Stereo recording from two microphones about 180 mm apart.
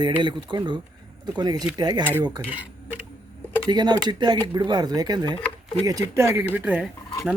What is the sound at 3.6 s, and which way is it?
Speech, 25° right (ahead or behind).